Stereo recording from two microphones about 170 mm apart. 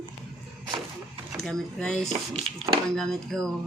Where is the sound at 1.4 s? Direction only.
5° left (ahead or behind).